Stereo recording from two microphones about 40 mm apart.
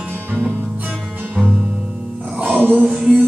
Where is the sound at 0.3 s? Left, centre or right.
Right.